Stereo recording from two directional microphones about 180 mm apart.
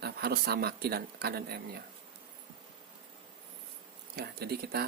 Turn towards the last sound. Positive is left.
turn(degrees=-60)  # may be behind; listen again after turning